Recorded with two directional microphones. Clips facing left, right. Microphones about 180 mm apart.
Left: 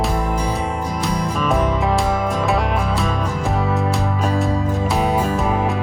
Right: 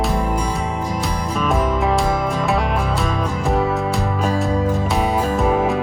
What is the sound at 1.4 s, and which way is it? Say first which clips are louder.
Music: right 1 dB; centre (ahead or behind).